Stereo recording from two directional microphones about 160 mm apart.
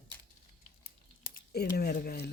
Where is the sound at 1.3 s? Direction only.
70° left (ahead or behind).